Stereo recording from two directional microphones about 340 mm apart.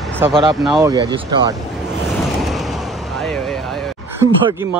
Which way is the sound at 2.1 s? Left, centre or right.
Centre.